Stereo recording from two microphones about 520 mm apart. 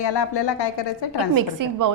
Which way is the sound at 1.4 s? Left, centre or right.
Right.